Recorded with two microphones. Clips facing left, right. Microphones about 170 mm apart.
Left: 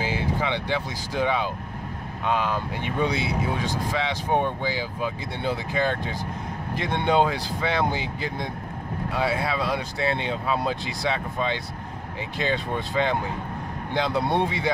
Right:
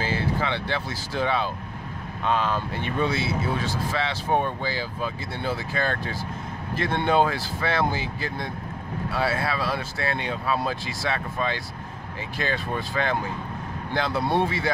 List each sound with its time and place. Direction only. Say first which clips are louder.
0.0 s speech: even; 15° left (ahead or behind)